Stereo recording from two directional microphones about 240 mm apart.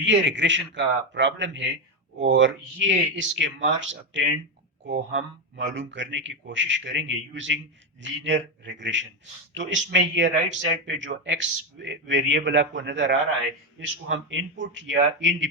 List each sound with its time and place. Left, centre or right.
0.0 s a man's voice: right